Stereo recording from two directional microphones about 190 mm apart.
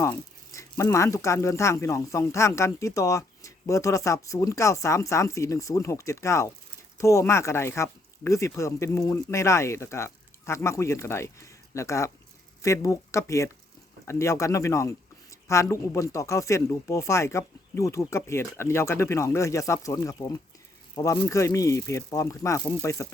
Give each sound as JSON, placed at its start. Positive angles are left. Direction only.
{"t": 0.0, "sound": "speech", "side_deg": 15}